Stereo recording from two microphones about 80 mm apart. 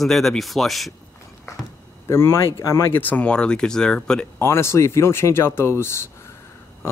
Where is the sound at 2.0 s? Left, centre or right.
Left.